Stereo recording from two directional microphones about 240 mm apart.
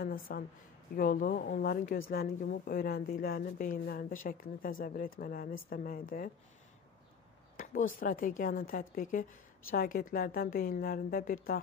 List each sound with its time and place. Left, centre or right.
0.0 s a woman's voice: left
7.5 s a sound: left
8.0 s a woman's voice: left